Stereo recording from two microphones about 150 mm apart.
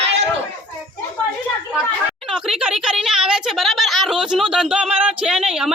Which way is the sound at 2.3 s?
5° right (ahead or behind).